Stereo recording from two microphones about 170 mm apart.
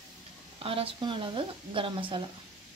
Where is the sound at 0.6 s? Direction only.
35° right (ahead or behind).